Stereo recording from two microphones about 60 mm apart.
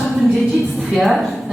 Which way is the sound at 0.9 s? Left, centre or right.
Centre.